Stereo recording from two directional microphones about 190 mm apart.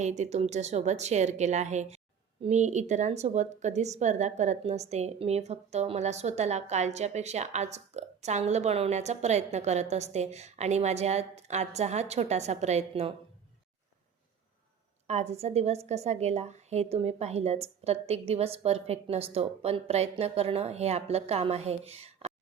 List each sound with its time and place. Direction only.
0.0 s a woman's voice: 35° right (ahead or behind)
15.0 s a woman's voice: 35° right (ahead or behind)